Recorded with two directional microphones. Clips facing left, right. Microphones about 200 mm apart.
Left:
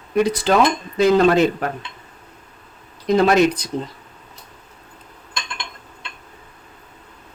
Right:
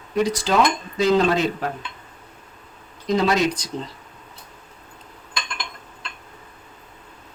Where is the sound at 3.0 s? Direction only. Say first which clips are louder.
Left 5 dB; 55° left (ahead or behind).